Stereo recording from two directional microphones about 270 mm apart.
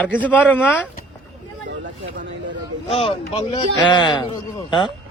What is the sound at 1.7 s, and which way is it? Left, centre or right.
Speech, right.